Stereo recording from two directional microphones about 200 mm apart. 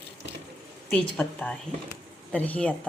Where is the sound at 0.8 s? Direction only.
5° left (ahead or behind).